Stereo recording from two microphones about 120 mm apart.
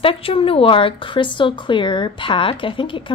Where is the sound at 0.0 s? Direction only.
50° left (ahead or behind).